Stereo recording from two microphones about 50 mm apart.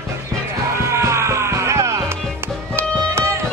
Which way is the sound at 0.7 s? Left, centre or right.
Right.